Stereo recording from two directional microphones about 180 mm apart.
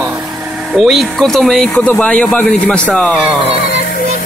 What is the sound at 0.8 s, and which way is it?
Speech, centre (ahead or behind).